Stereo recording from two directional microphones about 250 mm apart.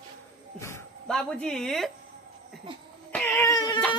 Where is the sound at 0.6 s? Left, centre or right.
Centre.